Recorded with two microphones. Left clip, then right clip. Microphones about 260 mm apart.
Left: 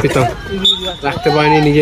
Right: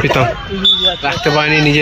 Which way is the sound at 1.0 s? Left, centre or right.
Centre.